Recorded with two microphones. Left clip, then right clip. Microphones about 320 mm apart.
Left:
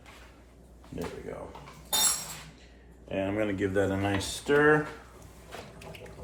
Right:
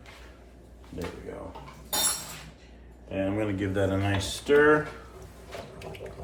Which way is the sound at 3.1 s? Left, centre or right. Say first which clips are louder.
Right 1 dB; left.